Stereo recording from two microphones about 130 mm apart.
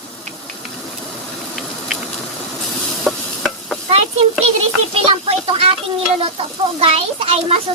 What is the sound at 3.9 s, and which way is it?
A child's voice, 45° right (ahead or behind).